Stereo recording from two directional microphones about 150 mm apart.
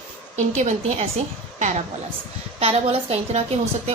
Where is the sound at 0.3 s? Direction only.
50° right (ahead or behind).